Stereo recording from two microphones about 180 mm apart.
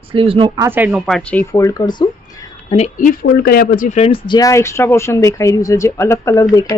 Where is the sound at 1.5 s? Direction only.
20° left (ahead or behind).